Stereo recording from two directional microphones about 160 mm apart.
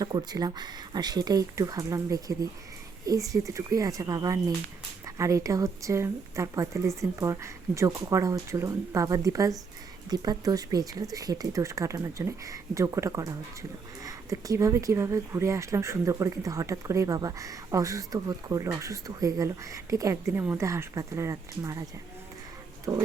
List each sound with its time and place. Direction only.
0.0 s speech: 25° right (ahead or behind)
22.9 s speech: 15° right (ahead or behind)